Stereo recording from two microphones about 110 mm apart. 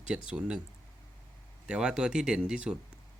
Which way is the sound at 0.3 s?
10° right (ahead or behind).